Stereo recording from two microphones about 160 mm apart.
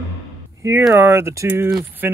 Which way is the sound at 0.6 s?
15° right (ahead or behind).